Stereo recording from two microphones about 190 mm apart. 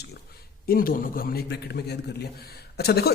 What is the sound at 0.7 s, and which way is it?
A man's voice, 50° left (ahead or behind).